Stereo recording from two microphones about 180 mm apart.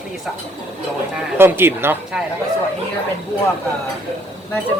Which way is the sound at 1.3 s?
10° right (ahead or behind).